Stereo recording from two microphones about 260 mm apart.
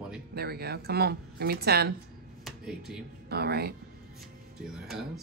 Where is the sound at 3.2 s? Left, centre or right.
Right.